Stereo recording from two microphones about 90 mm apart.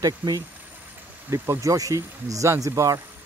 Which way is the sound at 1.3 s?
30° right (ahead or behind).